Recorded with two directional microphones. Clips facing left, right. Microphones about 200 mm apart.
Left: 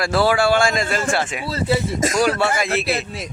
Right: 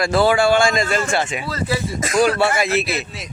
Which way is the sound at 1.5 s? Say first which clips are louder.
Left 5 dB; 25° left (ahead or behind).